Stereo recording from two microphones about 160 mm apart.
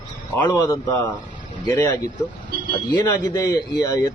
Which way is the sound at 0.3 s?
20° left (ahead or behind).